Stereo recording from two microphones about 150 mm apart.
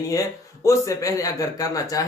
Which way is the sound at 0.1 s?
20° left (ahead or behind).